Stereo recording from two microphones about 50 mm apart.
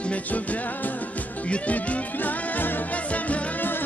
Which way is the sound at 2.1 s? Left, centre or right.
Left.